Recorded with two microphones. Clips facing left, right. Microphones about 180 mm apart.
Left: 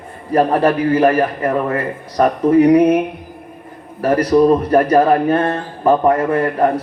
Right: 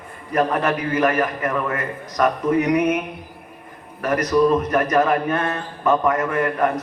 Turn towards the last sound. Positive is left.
turn(degrees=30)  # may be behind; listen again after turning